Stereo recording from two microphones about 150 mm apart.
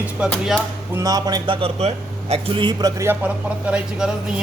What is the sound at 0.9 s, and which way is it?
Music, 25° right (ahead or behind).